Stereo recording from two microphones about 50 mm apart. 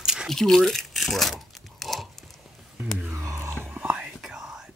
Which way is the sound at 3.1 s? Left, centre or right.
Right.